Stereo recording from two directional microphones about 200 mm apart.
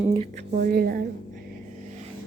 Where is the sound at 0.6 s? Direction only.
45° right (ahead or behind).